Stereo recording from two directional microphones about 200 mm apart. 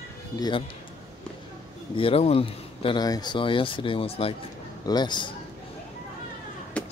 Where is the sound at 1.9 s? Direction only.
30° left (ahead or behind).